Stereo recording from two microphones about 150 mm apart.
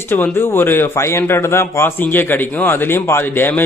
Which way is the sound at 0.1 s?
15° left (ahead or behind).